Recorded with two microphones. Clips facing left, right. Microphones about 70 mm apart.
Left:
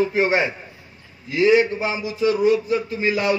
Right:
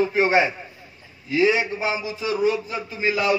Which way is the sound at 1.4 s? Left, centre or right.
Centre.